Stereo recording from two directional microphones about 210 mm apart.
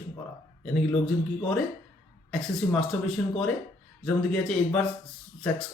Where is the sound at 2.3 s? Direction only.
Centre (ahead or behind).